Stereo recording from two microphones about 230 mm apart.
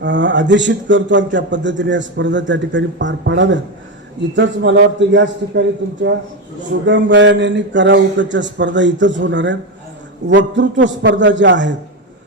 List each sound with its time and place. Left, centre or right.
0.0 s a man's voice: right